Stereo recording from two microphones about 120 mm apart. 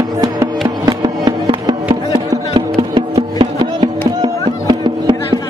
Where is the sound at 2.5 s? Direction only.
50° right (ahead or behind).